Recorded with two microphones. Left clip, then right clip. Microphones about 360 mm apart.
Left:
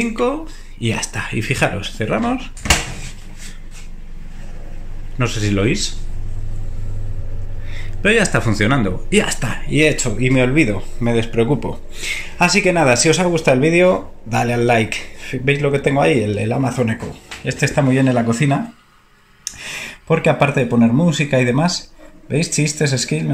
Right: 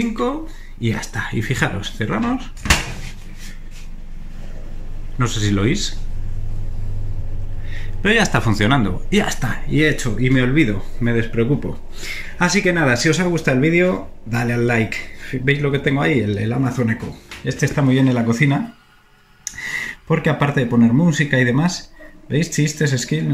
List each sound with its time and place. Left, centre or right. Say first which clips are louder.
0.2 s speech: left 3 dB; centre
5.1 s speech: left 1 dB; centre
7.7 s speech: left 2 dB; centre